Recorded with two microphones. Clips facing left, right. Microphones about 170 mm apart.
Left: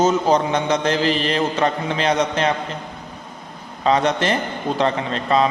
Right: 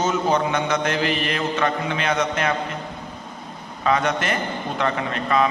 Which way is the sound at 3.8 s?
30° left (ahead or behind).